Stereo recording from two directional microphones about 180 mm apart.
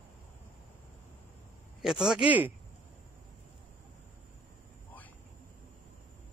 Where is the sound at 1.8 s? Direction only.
5° right (ahead or behind).